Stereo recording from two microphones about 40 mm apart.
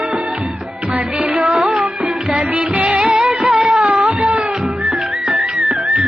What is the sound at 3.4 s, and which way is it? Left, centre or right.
Music of bollywood, right.